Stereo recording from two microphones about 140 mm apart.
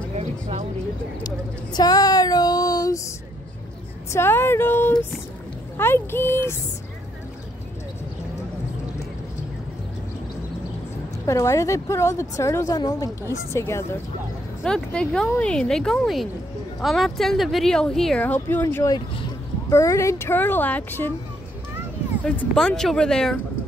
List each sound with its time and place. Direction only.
0.1 s a sound: 50° right (ahead or behind)
1.2 s a sound: 30° left (ahead or behind)
4.1 s speech: 15° left (ahead or behind)
11.2 s a woman's voice: 20° left (ahead or behind)
14.6 s speech: 5° left (ahead or behind)
18.9 s speech: 30° left (ahead or behind)
19.7 s speech: 20° left (ahead or behind)
22.2 s speech: 5° left (ahead or behind)